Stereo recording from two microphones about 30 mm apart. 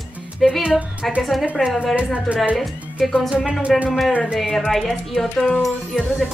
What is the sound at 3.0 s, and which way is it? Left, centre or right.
Speech, centre.